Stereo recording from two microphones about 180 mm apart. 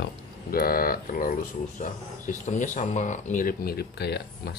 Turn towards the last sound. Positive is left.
turn(degrees=65)  # may be behind; listen again after turning